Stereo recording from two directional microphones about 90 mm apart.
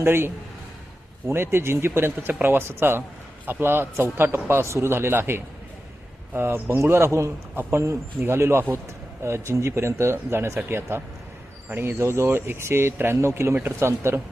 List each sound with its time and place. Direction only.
0.0 s speech: 25° right (ahead or behind)
1.3 s speech: 25° right (ahead or behind)